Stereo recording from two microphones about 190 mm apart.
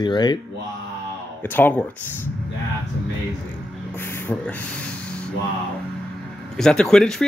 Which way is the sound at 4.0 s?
10° left (ahead or behind).